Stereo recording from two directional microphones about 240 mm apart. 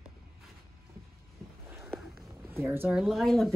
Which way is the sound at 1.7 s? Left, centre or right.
Centre.